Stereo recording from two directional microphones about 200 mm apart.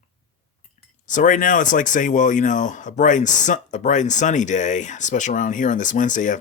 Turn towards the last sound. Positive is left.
turn(degrees=40)  # may be behind; listen again after turning